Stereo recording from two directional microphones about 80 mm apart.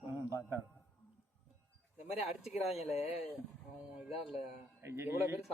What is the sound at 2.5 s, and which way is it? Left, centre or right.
Speech, centre.